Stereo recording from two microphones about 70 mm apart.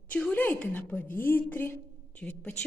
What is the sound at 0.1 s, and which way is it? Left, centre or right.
A woman's voice, centre.